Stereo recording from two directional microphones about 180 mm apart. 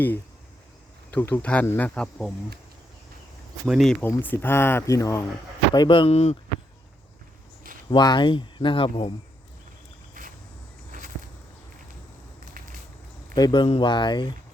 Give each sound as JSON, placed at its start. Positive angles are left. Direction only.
{"t": 1.1, "sound": "speech", "side_deg": 10}
{"t": 3.7, "sound": "speech", "side_deg": 0}
{"t": 7.9, "sound": "speech", "side_deg": 25}
{"t": 10.2, "sound": "a sound", "side_deg": -50}
{"t": 13.3, "sound": "speech", "side_deg": 25}